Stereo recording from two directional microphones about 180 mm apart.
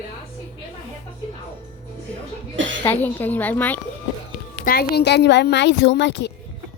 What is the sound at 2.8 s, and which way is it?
Speech, 10° left (ahead or behind).